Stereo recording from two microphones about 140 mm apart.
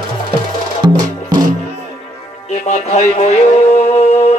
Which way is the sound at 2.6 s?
50° left (ahead or behind).